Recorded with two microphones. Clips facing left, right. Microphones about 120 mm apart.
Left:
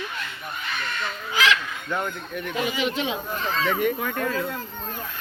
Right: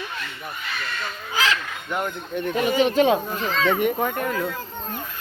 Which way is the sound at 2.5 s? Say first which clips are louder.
Right 7 dB; 45° right (ahead or behind).